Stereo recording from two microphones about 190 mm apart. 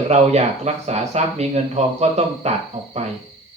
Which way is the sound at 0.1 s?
35° right (ahead or behind).